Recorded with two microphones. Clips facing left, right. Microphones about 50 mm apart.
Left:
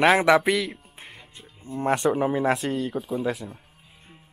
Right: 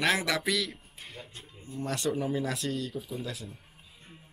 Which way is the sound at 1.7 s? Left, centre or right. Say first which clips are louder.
Left 9 dB; left.